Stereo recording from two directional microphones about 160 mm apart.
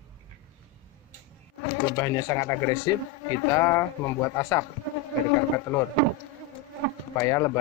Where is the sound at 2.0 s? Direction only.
20° left (ahead or behind).